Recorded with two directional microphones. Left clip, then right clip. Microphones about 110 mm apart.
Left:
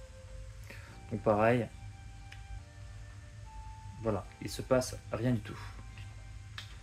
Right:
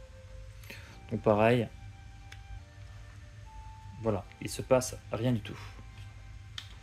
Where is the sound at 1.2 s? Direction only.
75° right (ahead or behind).